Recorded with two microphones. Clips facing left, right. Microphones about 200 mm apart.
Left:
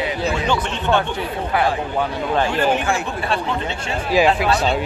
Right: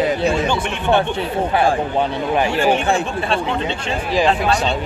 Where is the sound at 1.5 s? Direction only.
25° right (ahead or behind).